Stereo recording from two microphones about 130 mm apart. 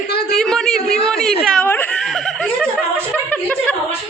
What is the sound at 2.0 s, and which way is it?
Snicker, centre (ahead or behind).